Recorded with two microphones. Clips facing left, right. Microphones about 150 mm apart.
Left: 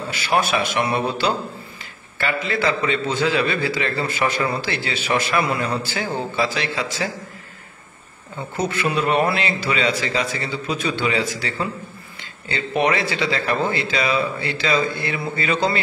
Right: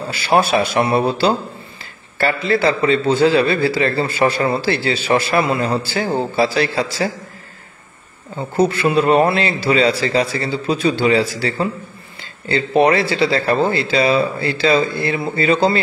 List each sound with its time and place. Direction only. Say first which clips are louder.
0.1 s a man's voice: right 5 dB; 30° right (ahead or behind)
8.5 s a man's voice: right 7 dB; 30° right (ahead or behind)